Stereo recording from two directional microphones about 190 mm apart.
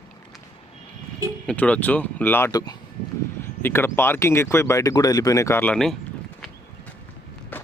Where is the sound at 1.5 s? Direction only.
5° left (ahead or behind).